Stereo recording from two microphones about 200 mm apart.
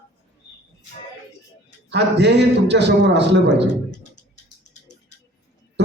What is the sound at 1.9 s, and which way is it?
A woman's voice, 60° right (ahead or behind).